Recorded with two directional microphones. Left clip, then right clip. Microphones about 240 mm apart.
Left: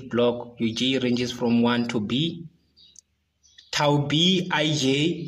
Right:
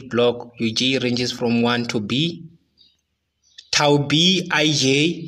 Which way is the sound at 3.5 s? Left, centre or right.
Right.